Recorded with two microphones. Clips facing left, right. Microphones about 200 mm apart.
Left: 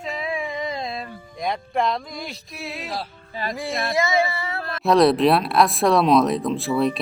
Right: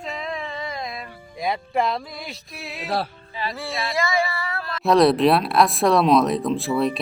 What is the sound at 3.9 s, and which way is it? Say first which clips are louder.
Female singing: left 2 dB; 20° left (ahead or behind).